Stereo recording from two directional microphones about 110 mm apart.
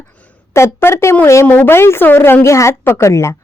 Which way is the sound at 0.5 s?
25° left (ahead or behind).